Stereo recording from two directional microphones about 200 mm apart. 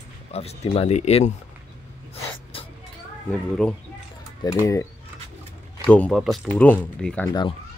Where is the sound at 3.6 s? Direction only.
5° left (ahead or behind).